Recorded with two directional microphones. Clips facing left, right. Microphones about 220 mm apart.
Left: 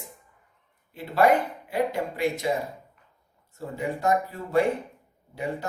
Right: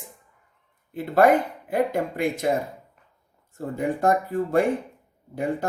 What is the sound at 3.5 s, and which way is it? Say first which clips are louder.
Speech: right 4 dB; 50° right (ahead or behind).